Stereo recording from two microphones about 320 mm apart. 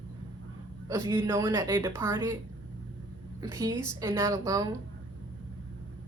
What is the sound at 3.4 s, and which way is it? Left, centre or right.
A woman's voice, centre.